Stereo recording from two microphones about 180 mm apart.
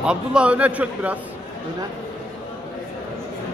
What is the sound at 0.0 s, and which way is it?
A man's voice, 5° right (ahead or behind).